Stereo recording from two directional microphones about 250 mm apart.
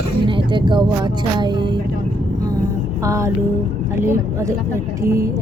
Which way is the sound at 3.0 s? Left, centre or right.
Centre.